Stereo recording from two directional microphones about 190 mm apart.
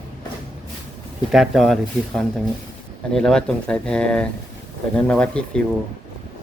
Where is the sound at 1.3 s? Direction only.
Centre (ahead or behind).